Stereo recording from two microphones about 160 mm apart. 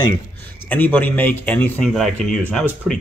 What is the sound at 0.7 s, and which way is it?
Speech, 10° left (ahead or behind).